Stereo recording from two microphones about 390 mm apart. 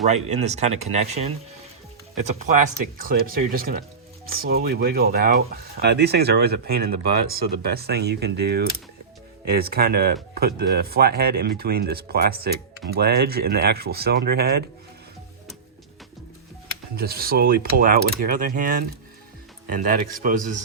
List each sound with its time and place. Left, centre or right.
0.1 s speech: centre
16.9 s speech: right